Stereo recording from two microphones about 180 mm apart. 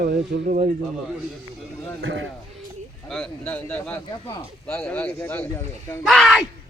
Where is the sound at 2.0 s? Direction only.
90° right.